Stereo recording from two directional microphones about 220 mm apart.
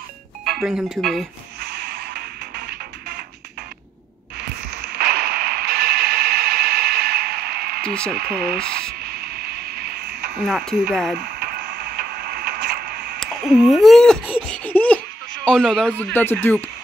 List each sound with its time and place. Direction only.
0.5 s speech: centre (ahead or behind)
4.4 s radio: 50° right (ahead or behind)
7.8 s speech: 5° left (ahead or behind)
8.1 s speech: 45° right (ahead or behind)
9.0 s a sound: 45° right (ahead or behind)
10.4 s laughter: centre (ahead or behind)
11.1 s radio: 45° right (ahead or behind)
13.2 s laughter: centre (ahead or behind)
15.4 s a man's voice: 5° left (ahead or behind)